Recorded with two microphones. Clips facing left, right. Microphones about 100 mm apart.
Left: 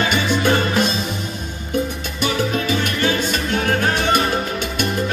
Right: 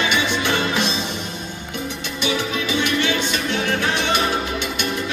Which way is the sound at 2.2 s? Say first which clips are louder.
Left 3 dB; 45° left (ahead or behind).